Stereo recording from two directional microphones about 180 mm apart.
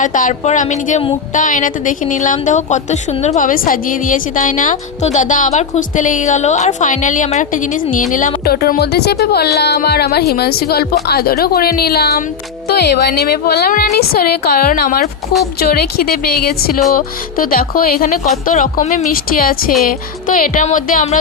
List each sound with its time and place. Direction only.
0.0 s a woman's voice: 45° left (ahead or behind)
8.4 s a woman's voice: 55° left (ahead or behind); by 19.0 s 40° left (ahead or behind)
19.1 s a woman's voice: 55° left (ahead or behind)